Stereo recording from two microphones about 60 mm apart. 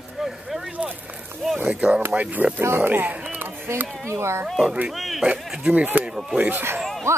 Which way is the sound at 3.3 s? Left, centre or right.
Right.